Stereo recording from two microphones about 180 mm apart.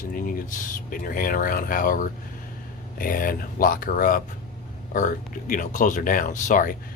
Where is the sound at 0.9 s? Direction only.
50° left (ahead or behind).